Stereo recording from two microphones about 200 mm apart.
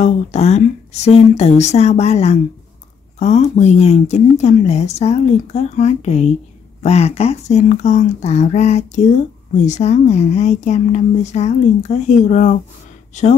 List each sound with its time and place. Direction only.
0.0 s speech: 35° left (ahead or behind)